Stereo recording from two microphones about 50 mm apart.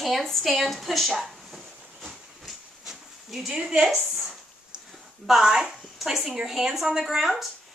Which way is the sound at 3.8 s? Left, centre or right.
Centre.